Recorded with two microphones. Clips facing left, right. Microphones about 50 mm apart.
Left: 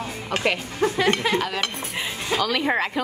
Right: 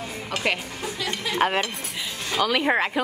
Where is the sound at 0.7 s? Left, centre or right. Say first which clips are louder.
Left 9 dB; left.